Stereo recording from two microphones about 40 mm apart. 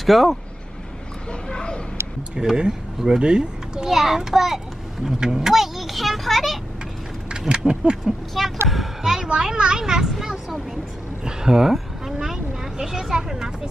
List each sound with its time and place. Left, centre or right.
0.0 s a child's voice: centre
1.5 s a sound: left
2.3 s a child's voice: centre
3.9 s a child's voice: centre
7.2 s a sound: right
8.0 s a child's voice: centre
9.0 s a child's voice: centre